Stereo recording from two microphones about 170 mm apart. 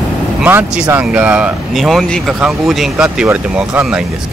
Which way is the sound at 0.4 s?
10° right (ahead or behind).